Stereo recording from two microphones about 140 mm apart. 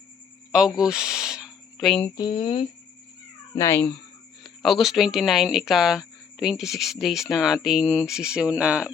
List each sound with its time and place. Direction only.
0.8 s a sound: 5° right (ahead or behind)
1.9 s speech: 10° left (ahead or behind)
2.1 s speech: 35° left (ahead or behind)
3.5 s speech: 20° left (ahead or behind)
4.4 s speech: centre (ahead or behind)